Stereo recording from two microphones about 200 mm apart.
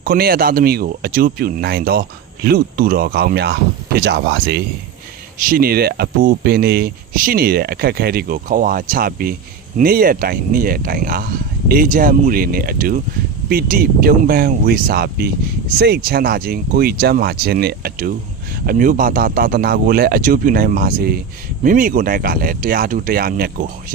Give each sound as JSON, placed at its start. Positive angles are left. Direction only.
{"t": 0.0, "sound": "speech", "side_deg": -45}